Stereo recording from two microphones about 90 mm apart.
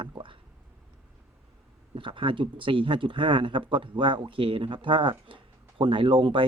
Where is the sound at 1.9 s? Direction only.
75° right (ahead or behind).